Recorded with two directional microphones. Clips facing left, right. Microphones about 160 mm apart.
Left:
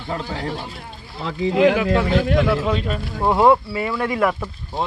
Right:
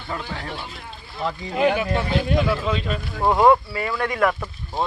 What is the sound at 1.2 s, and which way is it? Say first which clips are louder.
Speech: left 5 dB; 90° left.